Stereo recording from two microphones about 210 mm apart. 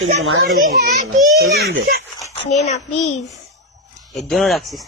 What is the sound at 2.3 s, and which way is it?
Speech, 30° left (ahead or behind).